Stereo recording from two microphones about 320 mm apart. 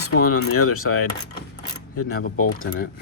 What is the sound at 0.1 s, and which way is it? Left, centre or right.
Speech, left.